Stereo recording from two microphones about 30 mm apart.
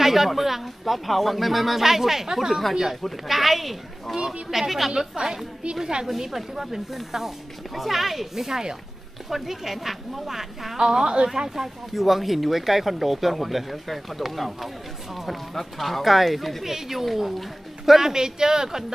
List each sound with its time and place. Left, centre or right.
0.0 s a sound: centre
0.3 s speech: centre
4.2 s speech: centre
4.9 s speech: centre
8.5 s speech: centre
9.3 s speech: centre
10.8 s speech: right; by 17.5 s centre
17.8 s speech: centre